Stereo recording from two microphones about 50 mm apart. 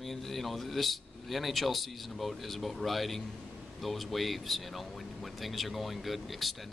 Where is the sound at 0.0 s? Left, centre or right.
Centre.